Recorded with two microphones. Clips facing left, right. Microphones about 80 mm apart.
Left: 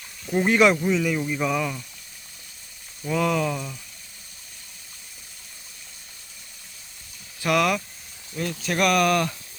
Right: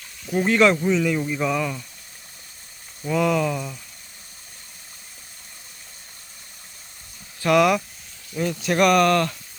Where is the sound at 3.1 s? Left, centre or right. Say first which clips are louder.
Right 2 dB; centre.